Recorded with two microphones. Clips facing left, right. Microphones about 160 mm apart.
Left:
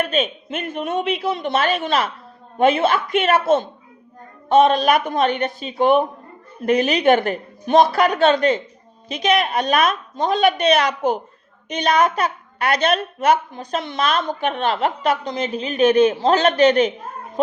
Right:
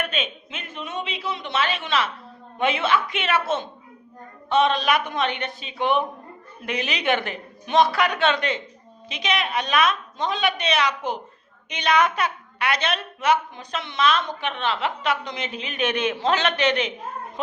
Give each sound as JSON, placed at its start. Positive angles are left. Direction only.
{"t": 0.0, "sound": "a woman's voice", "side_deg": 40}